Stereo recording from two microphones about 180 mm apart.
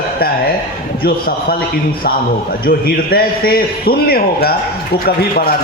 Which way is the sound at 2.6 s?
55° left (ahead or behind).